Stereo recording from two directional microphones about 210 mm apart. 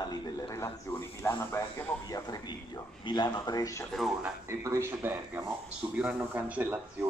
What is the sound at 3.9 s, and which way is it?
Speech, centre (ahead or behind).